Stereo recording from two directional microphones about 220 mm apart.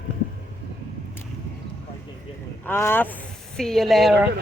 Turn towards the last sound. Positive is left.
turn(degrees=0)  # may be behind; listen again after turning